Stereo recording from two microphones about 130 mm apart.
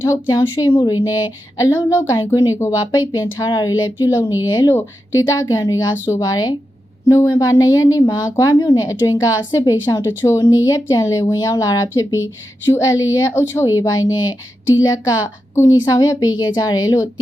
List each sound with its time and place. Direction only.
0.0 s speech: 25° left (ahead or behind)